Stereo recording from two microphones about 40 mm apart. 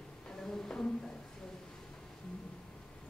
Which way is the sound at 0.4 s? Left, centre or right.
Centre.